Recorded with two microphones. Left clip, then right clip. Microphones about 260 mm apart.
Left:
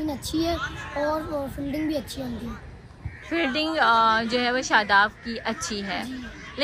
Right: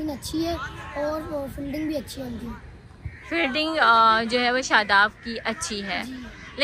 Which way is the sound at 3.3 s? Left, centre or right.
Centre.